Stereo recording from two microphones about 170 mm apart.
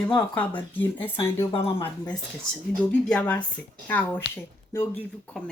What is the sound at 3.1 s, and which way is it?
Speech, 10° left (ahead or behind).